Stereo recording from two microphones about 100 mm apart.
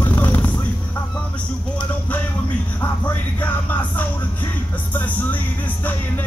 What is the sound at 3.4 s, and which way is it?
Music, 15° left (ahead or behind).